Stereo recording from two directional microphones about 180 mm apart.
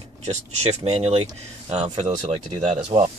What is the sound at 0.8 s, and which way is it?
Speech, 35° right (ahead or behind).